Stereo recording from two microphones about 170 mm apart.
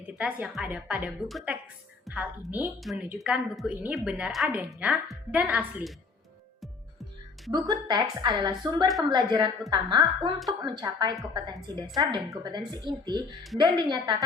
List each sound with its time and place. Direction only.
0.1 s a woman's voice: 5° right (ahead or behind)
7.5 s speech: 25° right (ahead or behind)